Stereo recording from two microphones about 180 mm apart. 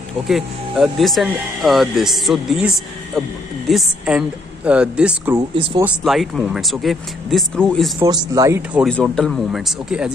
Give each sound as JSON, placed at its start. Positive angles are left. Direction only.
{"t": 0.3, "sound": "speech", "side_deg": 0}
{"t": 5.5, "sound": "speech", "side_deg": -30}
{"t": 6.0, "sound": "speech", "side_deg": 0}
{"t": 8.0, "sound": "speech", "side_deg": -20}
{"t": 8.8, "sound": "speech", "side_deg": 5}